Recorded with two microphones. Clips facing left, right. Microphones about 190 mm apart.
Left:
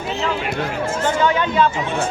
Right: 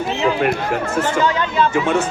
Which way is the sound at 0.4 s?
55° right (ahead or behind).